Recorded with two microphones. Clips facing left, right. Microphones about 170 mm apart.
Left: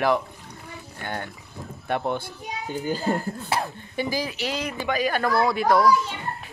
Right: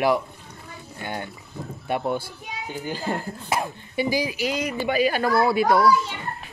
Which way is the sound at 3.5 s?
15° right (ahead or behind).